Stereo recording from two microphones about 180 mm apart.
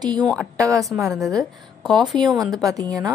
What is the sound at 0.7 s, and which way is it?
A woman's voice, centre (ahead or behind).